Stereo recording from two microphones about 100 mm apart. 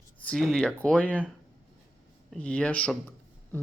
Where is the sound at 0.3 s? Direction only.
Centre (ahead or behind).